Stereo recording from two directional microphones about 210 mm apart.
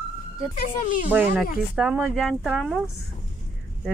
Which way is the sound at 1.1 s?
10° right (ahead or behind).